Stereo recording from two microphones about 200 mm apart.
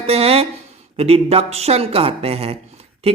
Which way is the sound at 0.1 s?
30° right (ahead or behind).